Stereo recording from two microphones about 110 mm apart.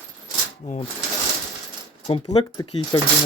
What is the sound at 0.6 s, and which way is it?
Speech, 90° left.